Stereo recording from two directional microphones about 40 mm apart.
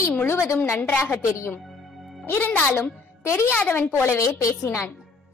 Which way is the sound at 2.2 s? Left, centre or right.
Left.